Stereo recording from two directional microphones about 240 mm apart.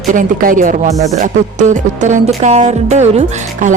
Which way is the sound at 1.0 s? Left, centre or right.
Right.